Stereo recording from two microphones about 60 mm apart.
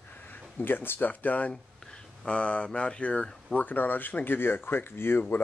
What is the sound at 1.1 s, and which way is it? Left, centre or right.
Speech, left.